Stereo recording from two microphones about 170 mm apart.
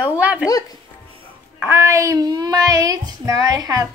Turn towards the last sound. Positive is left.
turn(degrees=-20)  # may be behind; listen again after turning